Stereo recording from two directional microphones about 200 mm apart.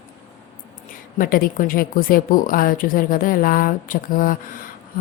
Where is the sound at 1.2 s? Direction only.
45° left (ahead or behind).